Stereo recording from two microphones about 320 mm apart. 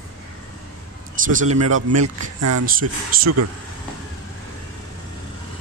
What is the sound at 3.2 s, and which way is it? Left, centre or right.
Speech, right.